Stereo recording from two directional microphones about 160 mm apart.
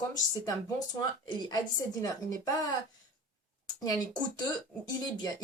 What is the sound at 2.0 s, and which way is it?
Speech, 20° left (ahead or behind).